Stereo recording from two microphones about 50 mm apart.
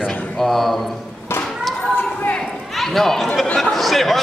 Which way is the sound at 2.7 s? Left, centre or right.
Centre.